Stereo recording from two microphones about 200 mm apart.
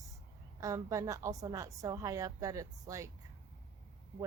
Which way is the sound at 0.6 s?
15° right (ahead or behind).